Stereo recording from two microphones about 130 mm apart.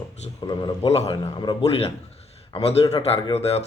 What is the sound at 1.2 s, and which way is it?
Speech, 35° left (ahead or behind).